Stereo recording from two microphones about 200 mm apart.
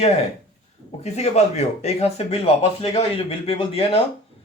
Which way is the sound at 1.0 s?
35° left (ahead or behind).